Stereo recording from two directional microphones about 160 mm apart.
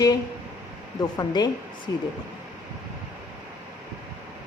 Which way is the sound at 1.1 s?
25° left (ahead or behind).